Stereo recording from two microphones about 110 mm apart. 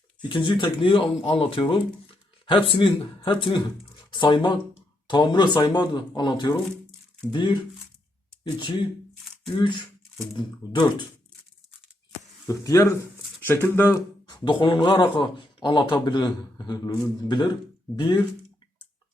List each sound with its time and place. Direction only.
0.2 s speech: 50° left (ahead or behind)
8.5 s speech: 50° left (ahead or behind)
12.5 s speech: 30° left (ahead or behind)
13.4 s speech: 20° left (ahead or behind)
14.3 s speech: 45° left (ahead or behind)